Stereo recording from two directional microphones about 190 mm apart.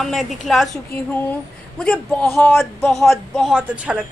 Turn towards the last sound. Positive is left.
turn(degrees=-5)  # may be behind; listen again after turning